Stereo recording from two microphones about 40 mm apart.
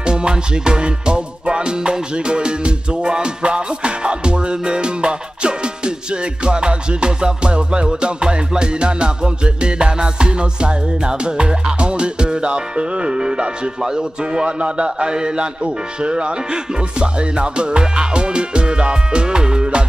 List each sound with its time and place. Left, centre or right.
0.0 s music: right